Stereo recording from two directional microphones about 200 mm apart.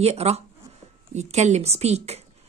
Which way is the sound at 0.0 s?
30° right (ahead or behind).